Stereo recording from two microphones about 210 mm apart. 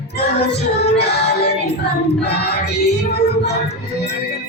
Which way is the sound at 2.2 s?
50° left (ahead or behind).